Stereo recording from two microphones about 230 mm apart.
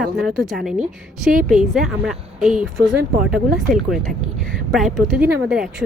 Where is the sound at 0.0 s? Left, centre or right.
Centre.